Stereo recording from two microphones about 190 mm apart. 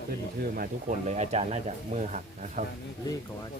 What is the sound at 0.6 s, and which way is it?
Speech, 40° right (ahead or behind).